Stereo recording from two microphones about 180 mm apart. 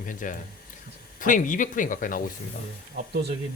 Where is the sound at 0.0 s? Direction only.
50° left (ahead or behind).